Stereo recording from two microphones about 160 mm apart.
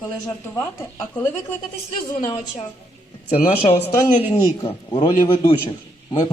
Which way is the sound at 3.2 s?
40° left (ahead or behind).